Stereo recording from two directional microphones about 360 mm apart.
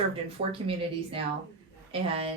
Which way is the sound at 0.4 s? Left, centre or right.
Right.